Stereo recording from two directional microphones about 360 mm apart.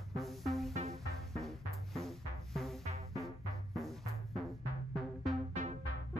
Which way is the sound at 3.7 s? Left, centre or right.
Centre.